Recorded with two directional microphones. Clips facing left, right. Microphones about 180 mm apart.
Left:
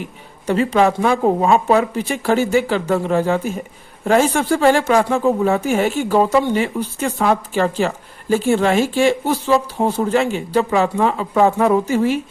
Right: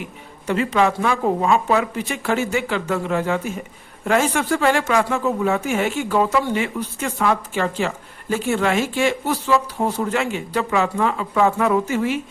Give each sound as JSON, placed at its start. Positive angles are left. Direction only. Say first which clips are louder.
{"t": 0.4, "sound": "speech", "louder": "left 3 dB", "side_deg": 35}